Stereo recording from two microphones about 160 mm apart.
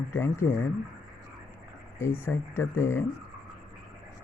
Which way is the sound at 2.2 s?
15° left (ahead or behind).